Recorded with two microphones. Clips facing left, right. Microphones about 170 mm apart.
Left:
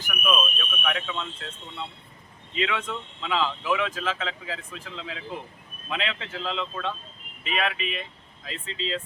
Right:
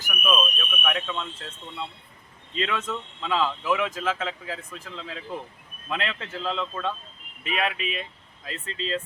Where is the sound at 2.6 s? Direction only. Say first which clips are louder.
Even; centre (ahead or behind).